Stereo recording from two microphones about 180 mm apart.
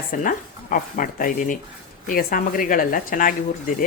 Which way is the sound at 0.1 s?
50° left (ahead or behind).